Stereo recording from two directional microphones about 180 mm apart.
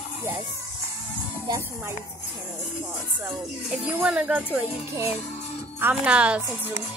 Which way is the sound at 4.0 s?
5° right (ahead or behind).